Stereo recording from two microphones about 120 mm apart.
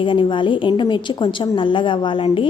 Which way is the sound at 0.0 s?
45° left (ahead or behind).